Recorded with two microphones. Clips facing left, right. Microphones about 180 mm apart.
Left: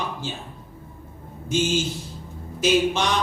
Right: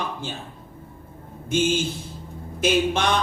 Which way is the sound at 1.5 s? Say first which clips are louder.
Right 1 dB; 55° right (ahead or behind).